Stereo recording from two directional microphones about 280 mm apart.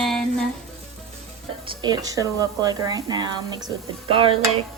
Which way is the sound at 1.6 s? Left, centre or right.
Centre.